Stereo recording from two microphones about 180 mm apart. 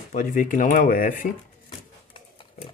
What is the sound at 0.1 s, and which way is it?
Speech, 45° left (ahead or behind).